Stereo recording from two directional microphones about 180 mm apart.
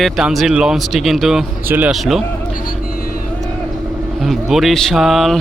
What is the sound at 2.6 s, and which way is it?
Vehicle, 50° left (ahead or behind).